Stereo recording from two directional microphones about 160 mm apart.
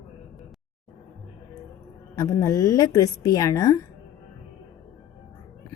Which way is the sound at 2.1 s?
20° left (ahead or behind).